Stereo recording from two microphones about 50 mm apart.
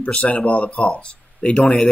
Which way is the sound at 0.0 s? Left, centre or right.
Left.